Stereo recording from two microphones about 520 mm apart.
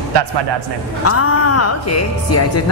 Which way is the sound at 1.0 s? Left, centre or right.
Left.